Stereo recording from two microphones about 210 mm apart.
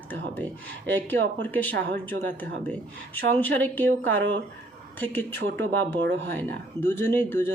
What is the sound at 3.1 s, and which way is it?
Speech, 10° left (ahead or behind).